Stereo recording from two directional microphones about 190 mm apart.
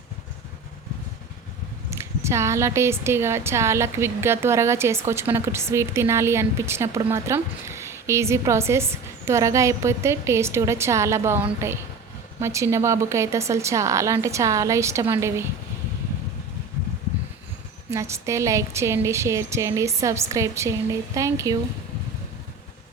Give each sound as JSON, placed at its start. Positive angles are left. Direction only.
{"t": 1.9, "sound": "a woman's voice", "side_deg": -15}
{"t": 17.9, "sound": "a woman's voice", "side_deg": -15}